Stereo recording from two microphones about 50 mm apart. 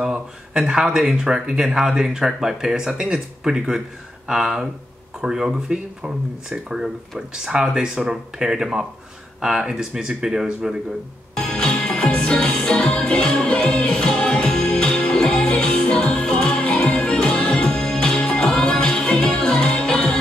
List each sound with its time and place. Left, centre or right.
0.0 s speech: centre
11.3 s music: centre